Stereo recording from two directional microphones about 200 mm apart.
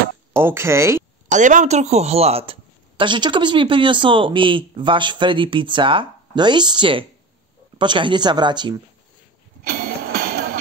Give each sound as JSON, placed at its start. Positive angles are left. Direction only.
{"t": 0.3, "sound": "speech", "side_deg": -10}
{"t": 1.3, "sound": "a woman's voice", "side_deg": -40}
{"t": 9.7, "sound": "music", "side_deg": -50}